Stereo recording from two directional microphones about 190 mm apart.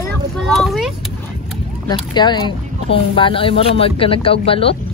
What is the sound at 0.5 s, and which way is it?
Vehicle, centre (ahead or behind).